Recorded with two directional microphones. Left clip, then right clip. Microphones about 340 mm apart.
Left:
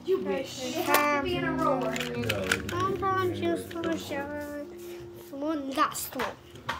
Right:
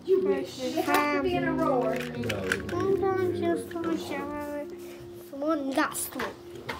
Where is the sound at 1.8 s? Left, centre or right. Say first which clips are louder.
Right 1 dB; centre.